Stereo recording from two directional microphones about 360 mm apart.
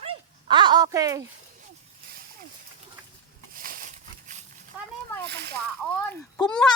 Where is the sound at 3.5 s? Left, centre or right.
Centre.